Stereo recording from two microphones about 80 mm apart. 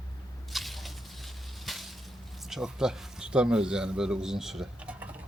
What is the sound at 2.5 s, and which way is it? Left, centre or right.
A man's voice, centre.